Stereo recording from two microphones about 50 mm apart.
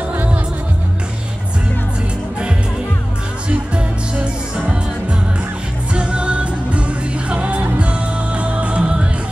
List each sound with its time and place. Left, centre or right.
3.4 s music: right
5.9 s music: right